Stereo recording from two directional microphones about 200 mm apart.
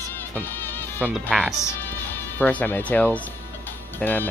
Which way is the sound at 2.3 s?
10° left (ahead or behind).